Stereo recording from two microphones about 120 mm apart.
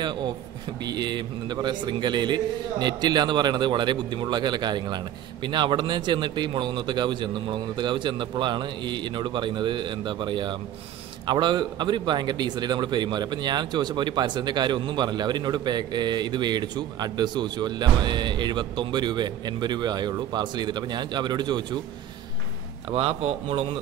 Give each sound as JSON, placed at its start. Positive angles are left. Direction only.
{"t": 0.8, "sound": "a man's voice", "side_deg": -35}
{"t": 22.9, "sound": "a man's voice", "side_deg": -50}